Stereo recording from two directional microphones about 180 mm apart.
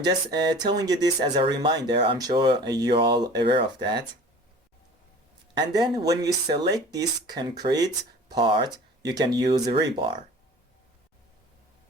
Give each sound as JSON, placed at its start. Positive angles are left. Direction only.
{"t": 0.0, "sound": "speech", "side_deg": -20}
{"t": 5.5, "sound": "speech", "side_deg": -25}